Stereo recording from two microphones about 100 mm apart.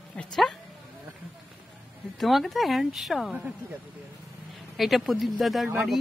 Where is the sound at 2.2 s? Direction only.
Centre (ahead or behind).